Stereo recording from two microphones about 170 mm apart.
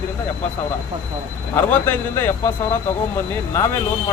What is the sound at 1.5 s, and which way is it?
A man's voice, 10° left (ahead or behind).